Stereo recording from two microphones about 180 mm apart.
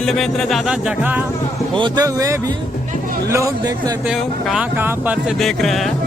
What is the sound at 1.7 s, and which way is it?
Speech, 25° right (ahead or behind).